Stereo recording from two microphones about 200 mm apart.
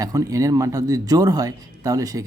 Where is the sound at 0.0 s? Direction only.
15° right (ahead or behind).